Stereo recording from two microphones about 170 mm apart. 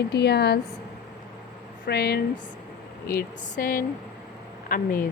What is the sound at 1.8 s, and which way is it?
Speech, 75° left (ahead or behind).